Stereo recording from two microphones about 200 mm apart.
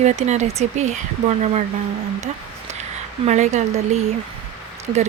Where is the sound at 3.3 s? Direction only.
35° right (ahead or behind).